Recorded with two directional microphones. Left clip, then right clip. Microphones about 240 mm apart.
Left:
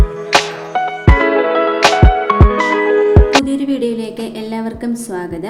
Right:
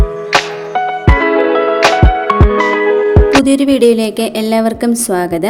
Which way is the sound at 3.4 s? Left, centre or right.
Right.